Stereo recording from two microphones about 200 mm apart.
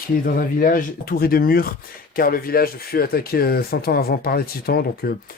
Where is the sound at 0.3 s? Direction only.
45° left (ahead or behind).